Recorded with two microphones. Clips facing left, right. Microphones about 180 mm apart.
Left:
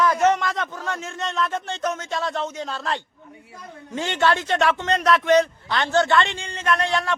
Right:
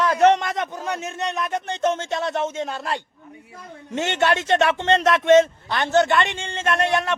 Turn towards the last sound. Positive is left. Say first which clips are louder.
# right 1 dB
turn(degrees=-20)  # may be behind; listen again after turning